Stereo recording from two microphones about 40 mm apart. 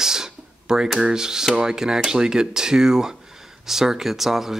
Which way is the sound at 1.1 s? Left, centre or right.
Centre.